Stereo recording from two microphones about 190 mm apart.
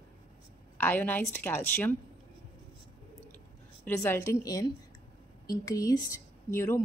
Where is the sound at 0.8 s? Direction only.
10° left (ahead or behind).